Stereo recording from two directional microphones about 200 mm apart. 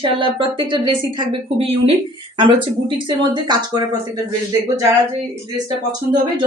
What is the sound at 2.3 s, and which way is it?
Speech, 25° right (ahead or behind).